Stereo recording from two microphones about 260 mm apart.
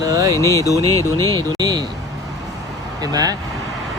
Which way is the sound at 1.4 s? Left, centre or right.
Centre.